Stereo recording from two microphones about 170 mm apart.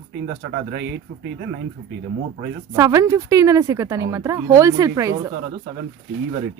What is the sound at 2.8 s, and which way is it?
Speech, 20° right (ahead or behind).